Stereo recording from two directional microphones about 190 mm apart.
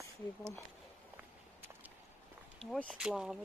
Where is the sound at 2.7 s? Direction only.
Centre (ahead or behind).